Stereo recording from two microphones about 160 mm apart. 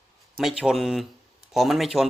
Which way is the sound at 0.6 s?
Centre (ahead or behind).